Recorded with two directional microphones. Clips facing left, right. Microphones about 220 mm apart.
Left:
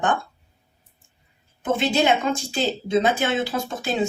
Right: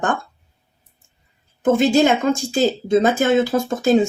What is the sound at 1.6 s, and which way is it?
Speech, 45° right (ahead or behind).